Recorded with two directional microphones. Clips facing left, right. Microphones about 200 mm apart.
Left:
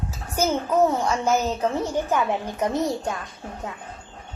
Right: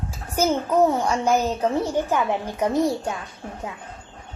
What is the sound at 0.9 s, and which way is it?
A woman's voice, 10° right (ahead or behind).